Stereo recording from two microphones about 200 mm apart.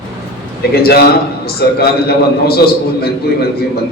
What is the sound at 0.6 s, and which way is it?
A man's voice, 50° left (ahead or behind).